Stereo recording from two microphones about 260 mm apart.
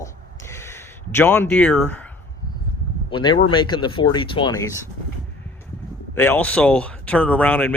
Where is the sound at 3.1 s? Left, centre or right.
Centre.